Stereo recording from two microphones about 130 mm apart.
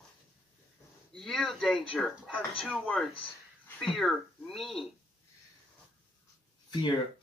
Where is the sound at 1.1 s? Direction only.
Centre (ahead or behind).